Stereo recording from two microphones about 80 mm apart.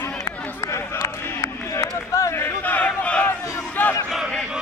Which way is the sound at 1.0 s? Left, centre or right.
Left.